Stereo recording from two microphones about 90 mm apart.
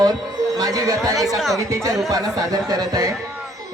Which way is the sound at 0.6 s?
40° right (ahead or behind).